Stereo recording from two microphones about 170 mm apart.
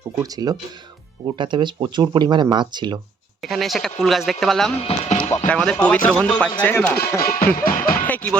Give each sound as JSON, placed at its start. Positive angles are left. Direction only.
{"t": 0.2, "sound": "speech", "side_deg": -20}
{"t": 3.4, "sound": "speech", "side_deg": 0}
{"t": 4.8, "sound": "speech", "side_deg": 35}
{"t": 5.5, "sound": "speech", "side_deg": 5}
{"t": 7.5, "sound": "music", "side_deg": 55}
{"t": 8.0, "sound": "music", "side_deg": 10}